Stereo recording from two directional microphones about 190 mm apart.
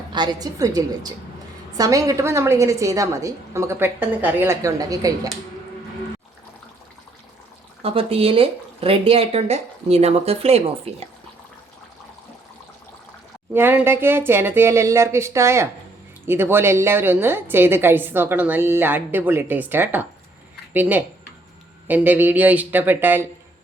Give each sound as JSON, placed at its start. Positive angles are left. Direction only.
{"t": 0.1, "sound": "a woman's voice", "side_deg": -20}
{"t": 7.8, "sound": "speech", "side_deg": -30}
{"t": 13.5, "sound": "a woman's voice", "side_deg": -10}